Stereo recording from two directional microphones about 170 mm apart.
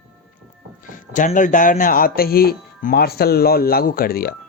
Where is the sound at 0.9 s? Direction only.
50° left (ahead or behind).